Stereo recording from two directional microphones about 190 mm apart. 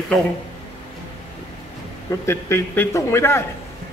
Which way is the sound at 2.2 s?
15° left (ahead or behind).